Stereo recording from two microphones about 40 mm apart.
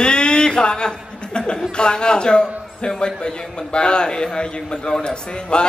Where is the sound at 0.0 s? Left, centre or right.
Left.